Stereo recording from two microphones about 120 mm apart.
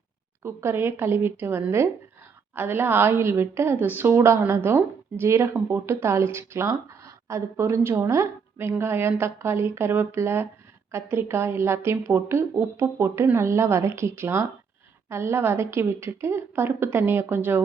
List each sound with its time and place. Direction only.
0.4 s a woman's voice: 20° right (ahead or behind)